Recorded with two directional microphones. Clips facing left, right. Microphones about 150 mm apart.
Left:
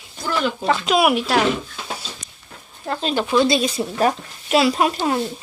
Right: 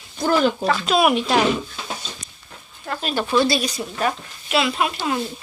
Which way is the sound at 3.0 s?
15° left (ahead or behind).